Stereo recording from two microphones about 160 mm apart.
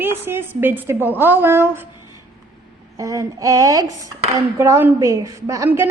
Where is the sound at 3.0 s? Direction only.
20° right (ahead or behind).